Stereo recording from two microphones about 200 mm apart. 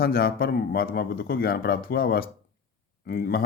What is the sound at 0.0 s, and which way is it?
A man's voice, 50° left (ahead or behind).